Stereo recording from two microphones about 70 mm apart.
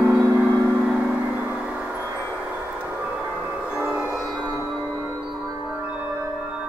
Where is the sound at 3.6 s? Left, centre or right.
Centre.